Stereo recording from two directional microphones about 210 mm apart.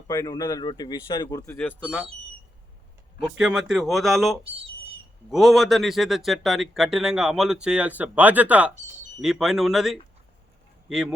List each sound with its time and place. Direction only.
0.1 s speech: 15° left (ahead or behind)
1.7 s speech: 5° right (ahead or behind)
3.3 s speech: 5° right (ahead or behind)